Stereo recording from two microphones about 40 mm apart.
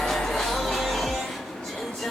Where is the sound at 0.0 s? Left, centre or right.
Centre.